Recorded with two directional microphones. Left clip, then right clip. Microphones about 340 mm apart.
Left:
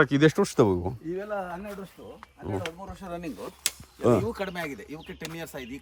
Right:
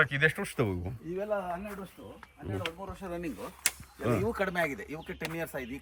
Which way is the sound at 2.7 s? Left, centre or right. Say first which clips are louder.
Left 1 dB; left.